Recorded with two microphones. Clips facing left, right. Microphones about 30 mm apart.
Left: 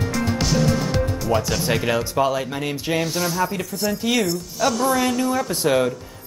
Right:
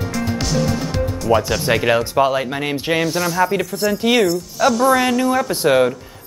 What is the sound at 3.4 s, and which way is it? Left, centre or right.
Speech, right.